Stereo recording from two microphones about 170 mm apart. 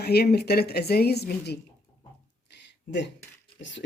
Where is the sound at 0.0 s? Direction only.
70° left (ahead or behind).